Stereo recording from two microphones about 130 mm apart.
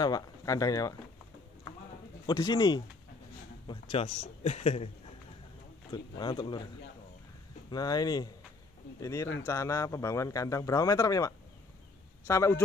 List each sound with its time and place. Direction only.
0.0 s speech: 30° left (ahead or behind)
2.2 s speech: 35° left (ahead or behind)
4.4 s speech: 55° left (ahead or behind)
5.9 s speech: 35° left (ahead or behind)
7.7 s speech: 30° left (ahead or behind)